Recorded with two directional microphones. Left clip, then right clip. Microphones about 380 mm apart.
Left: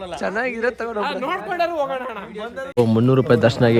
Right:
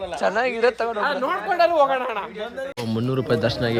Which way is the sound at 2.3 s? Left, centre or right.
Centre.